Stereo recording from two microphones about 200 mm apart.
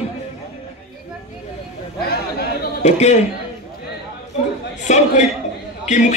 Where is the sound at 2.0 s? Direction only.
50° left (ahead or behind).